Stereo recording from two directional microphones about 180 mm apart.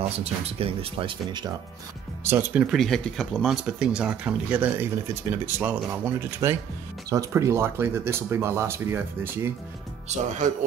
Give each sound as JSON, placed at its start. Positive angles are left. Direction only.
{"t": 0.2, "sound": "speech", "side_deg": -35}
{"t": 2.2, "sound": "speech", "side_deg": -10}